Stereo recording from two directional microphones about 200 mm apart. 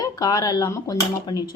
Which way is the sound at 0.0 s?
20° left (ahead or behind).